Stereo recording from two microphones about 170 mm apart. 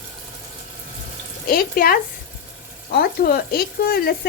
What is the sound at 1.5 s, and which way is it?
Speech, 60° left (ahead or behind).